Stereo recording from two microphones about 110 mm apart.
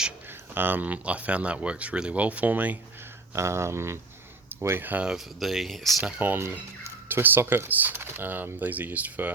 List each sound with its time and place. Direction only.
0.5 s speech: 20° right (ahead or behind)
3.3 s speech: 25° right (ahead or behind)
5.1 s speech: centre (ahead or behind)
6.1 s speech: 15° right (ahead or behind)